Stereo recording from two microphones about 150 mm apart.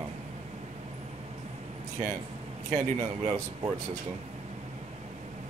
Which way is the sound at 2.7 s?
20° right (ahead or behind).